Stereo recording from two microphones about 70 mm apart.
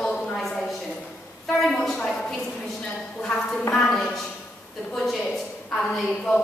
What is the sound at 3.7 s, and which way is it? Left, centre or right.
Speech, centre.